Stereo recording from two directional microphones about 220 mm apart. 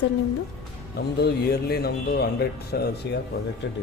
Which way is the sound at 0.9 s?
45° left (ahead or behind).